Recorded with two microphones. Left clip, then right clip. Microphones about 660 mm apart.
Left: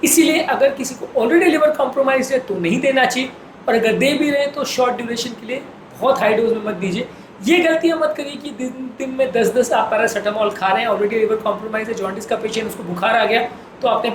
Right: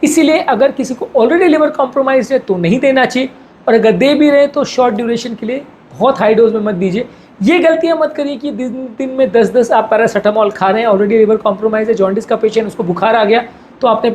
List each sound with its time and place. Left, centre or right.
0.0 s a woman's voice: right